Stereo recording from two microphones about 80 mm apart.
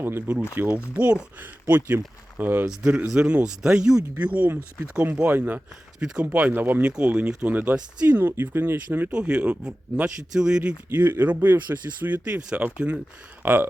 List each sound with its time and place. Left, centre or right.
0.0 s speech: right
2.4 s speech: right
2.6 s speech: centre
4.4 s speech: right
9.1 s speech: centre
10.8 s speech: right